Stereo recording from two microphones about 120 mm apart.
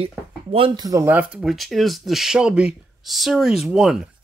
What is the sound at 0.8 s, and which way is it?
Speech, 30° right (ahead or behind).